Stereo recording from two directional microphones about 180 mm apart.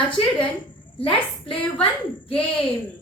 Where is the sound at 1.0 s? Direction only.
30° left (ahead or behind).